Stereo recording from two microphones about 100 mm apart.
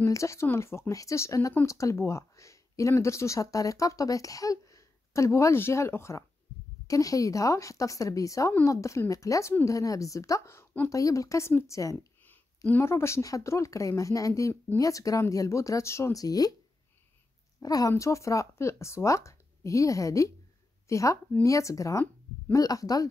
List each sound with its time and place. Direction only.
0.0 s speech: 30° left (ahead or behind)
12.3 s speech: 20° left (ahead or behind); by 16.5 s 40° left (ahead or behind)
17.6 s speech: 40° left (ahead or behind)